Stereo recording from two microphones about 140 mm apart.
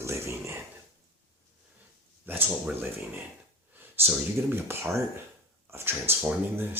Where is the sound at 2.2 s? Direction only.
15° right (ahead or behind).